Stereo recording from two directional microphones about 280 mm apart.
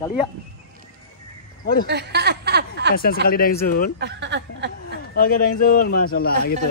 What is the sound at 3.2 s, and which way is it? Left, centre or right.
Speech, left.